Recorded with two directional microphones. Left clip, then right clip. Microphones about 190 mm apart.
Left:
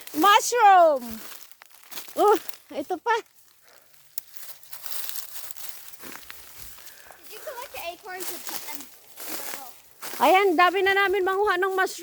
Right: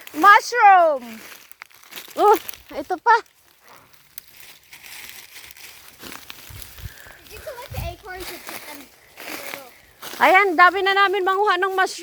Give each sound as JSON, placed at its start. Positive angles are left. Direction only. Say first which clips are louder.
{"t": 0.2, "sound": "speech", "louder": "right 5 dB", "side_deg": 30}
{"t": 1.1, "sound": "speech", "louder": "right 3 dB", "side_deg": -25}
{"t": 2.1, "sound": "speech", "louder": "right 4 dB", "side_deg": 10}
{"t": 6.0, "sound": "pig", "louder": "right 5 dB", "side_deg": -60}
{"t": 7.7, "sound": "a sound", "louder": "right 1 dB", "side_deg": -25}
{"t": 8.2, "sound": "speech", "louder": "right 3 dB", "side_deg": -30}
{"t": 9.1, "sound": "a sound", "louder": "right 5 dB", "side_deg": -25}
{"t": 10.2, "sound": "speech", "louder": "right 5 dB", "side_deg": 25}